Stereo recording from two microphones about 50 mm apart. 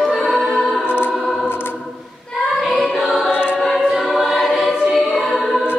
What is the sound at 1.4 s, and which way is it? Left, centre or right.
Choir, left.